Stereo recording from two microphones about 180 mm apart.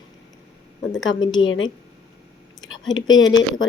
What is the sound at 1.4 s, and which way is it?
Speech, 90° left.